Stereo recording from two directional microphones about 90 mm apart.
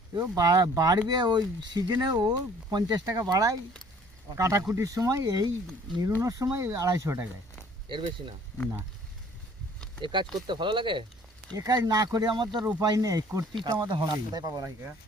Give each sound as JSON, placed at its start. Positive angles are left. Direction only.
{"t": 0.2, "sound": "speech", "side_deg": -40}
{"t": 7.9, "sound": "speech", "side_deg": -65}
{"t": 10.0, "sound": "speech", "side_deg": -60}
{"t": 11.5, "sound": "speech", "side_deg": -45}
{"t": 12.8, "sound": "speech", "side_deg": -45}
{"t": 13.7, "sound": "speech", "side_deg": -55}